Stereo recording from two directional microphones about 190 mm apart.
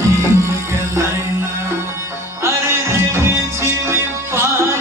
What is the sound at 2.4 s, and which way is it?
Music, 15° right (ahead or behind).